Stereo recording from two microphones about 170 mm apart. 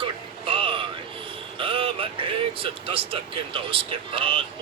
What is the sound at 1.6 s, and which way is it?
Speech, 30° right (ahead or behind).